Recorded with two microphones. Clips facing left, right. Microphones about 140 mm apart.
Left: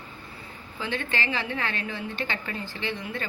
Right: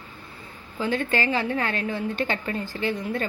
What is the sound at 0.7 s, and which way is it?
A woman's voice, 40° right (ahead or behind).